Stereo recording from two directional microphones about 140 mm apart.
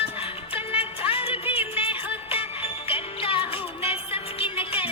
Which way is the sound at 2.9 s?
40° left (ahead or behind).